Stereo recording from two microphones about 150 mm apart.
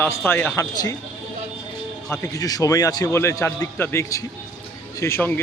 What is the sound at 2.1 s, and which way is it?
A man's voice, 20° left (ahead or behind).